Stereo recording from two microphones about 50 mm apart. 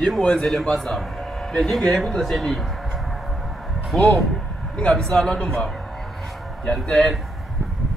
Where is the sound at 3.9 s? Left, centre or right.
Centre.